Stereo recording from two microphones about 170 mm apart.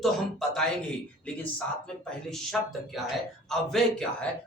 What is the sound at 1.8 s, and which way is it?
Speech, 5° left (ahead or behind).